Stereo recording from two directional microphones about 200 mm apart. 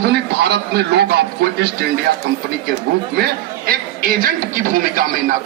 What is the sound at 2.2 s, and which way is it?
Speech, 55° right (ahead or behind).